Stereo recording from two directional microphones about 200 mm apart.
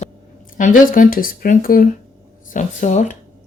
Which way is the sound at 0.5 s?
45° left (ahead or behind).